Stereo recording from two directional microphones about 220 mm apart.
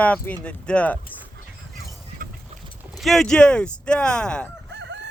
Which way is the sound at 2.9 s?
Centre (ahead or behind).